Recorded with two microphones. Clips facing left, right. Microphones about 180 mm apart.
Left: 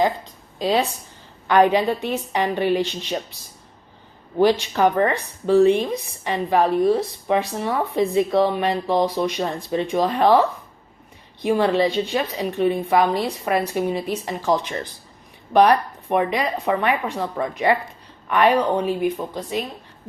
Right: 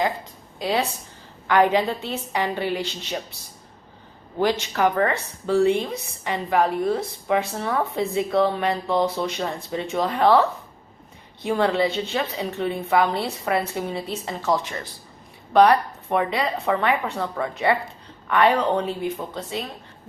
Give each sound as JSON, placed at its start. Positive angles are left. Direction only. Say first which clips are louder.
{"t": 0.6, "sound": "speech", "louder": "left 3 dB", "side_deg": 20}
{"t": 4.8, "sound": "a woman's voice", "louder": "left 1 dB", "side_deg": 20}
{"t": 11.4, "sound": "a woman's voice", "louder": "left 3 dB", "side_deg": 15}